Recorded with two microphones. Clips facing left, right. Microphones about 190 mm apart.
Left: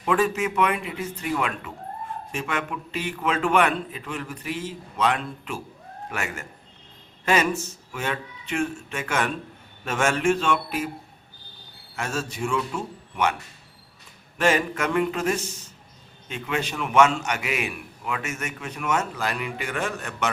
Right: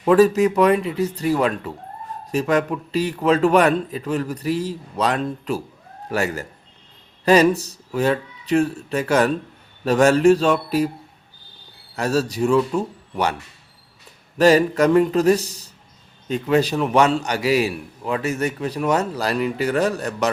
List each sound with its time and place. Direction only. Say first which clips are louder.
0.0 s a man's voice: right 9 dB; 40° right (ahead or behind)
11.9 s a man's voice: right 9 dB; 35° right (ahead or behind)
14.3 s a man's voice: right 8 dB; 35° right (ahead or behind)